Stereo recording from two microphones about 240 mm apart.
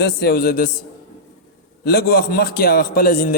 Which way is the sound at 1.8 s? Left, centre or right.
Left.